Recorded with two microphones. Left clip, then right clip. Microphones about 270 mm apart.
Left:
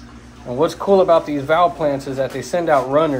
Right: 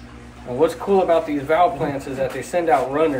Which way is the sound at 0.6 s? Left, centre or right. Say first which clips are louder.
Left 3 dB; left.